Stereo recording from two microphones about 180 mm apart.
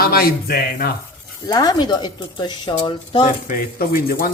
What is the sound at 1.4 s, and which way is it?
A woman's voice, 20° left (ahead or behind).